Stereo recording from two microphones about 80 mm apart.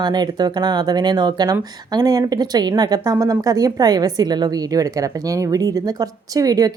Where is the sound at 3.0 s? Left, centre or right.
Right.